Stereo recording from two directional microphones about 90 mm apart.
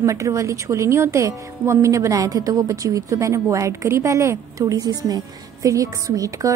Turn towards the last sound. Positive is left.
turn(degrees=-40)  # may be behind; listen again after turning